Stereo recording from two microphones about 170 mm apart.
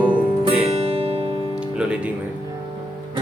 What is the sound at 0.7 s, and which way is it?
Music, 35° right (ahead or behind).